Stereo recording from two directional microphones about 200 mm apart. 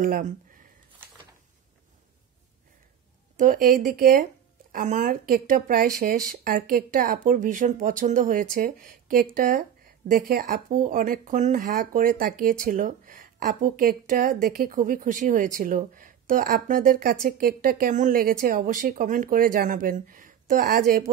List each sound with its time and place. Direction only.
0.0 s speech: 45° right (ahead or behind)
3.3 s speech: 40° right (ahead or behind)